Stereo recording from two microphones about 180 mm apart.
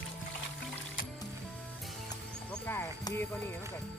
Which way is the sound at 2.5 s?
10° left (ahead or behind).